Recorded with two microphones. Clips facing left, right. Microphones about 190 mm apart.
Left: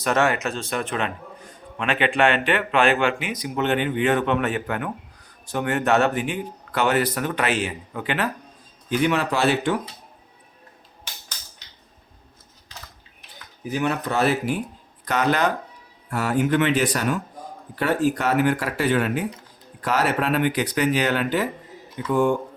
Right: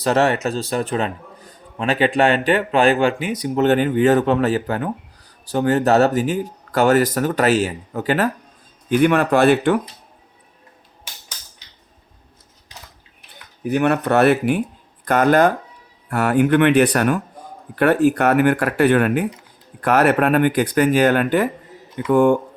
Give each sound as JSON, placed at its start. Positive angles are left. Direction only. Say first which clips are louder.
{"t": 0.0, "sound": "a man's voice", "louder": "right 4 dB", "side_deg": -35}
{"t": 8.9, "sound": "speech", "louder": "right 6 dB", "side_deg": -55}
{"t": 13.7, "sound": "speech", "louder": "right 7 dB", "side_deg": -60}
{"t": 15.0, "sound": "speech", "louder": "right 7 dB", "side_deg": -50}
{"t": 16.0, "sound": "speech", "louder": "right 5 dB", "side_deg": -65}